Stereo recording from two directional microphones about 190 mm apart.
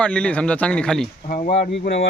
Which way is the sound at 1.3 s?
40° left (ahead or behind).